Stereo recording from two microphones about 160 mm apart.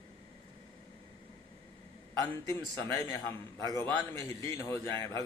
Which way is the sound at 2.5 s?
15° left (ahead or behind).